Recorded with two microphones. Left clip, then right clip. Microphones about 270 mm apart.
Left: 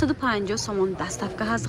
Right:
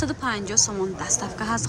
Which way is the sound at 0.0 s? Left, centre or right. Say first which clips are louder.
Left 3 dB; centre.